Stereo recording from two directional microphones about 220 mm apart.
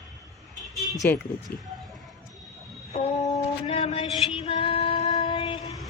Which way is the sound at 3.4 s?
25° left (ahead or behind).